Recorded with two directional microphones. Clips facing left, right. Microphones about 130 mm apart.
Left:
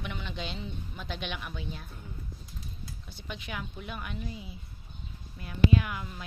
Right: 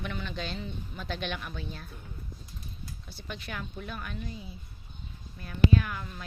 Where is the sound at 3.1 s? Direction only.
15° left (ahead or behind).